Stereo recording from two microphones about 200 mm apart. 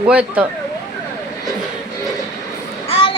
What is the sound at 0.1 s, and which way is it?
Speech, 5° right (ahead or behind).